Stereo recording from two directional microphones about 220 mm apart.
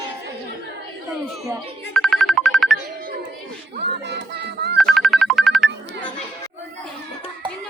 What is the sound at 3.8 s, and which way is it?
Music, 50° right (ahead or behind).